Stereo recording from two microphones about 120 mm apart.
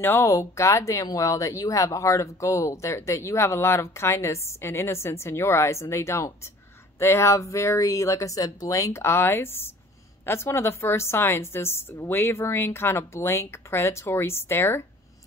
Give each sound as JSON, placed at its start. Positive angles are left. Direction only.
{"t": 0.0, "sound": "speech", "side_deg": 20}